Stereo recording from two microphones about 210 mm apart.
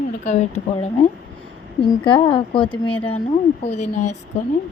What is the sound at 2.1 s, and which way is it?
Speech, 25° left (ahead or behind).